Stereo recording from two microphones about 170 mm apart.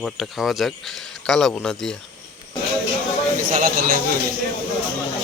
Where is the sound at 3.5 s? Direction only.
55° right (ahead or behind).